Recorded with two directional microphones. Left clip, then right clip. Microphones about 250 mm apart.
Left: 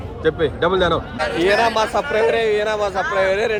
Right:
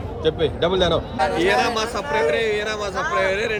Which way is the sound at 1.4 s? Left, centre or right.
Centre.